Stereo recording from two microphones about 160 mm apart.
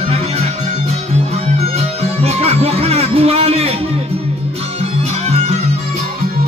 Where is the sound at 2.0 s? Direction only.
40° right (ahead or behind).